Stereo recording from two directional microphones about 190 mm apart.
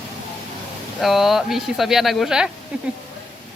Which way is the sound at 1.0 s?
Centre (ahead or behind).